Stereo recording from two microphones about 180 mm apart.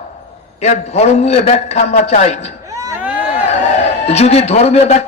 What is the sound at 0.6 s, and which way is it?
A man's voice, 35° left (ahead or behind).